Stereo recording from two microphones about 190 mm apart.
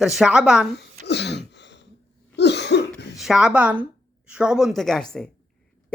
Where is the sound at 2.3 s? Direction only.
65° left (ahead or behind).